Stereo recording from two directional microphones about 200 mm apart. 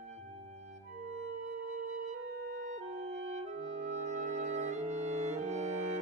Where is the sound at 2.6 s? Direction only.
35° right (ahead or behind).